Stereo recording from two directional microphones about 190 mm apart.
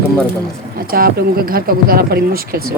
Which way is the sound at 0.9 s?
50° right (ahead or behind).